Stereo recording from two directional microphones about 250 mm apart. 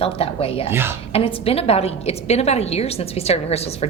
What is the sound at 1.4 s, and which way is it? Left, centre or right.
A woman's voice, left.